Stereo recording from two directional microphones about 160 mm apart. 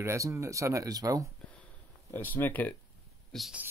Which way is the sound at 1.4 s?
10° left (ahead or behind).